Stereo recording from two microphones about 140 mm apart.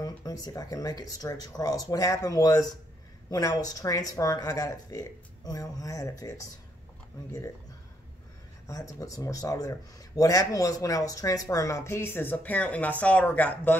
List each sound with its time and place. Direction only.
0.0 s speech: 25° left (ahead or behind)
8.6 s speech: 25° left (ahead or behind)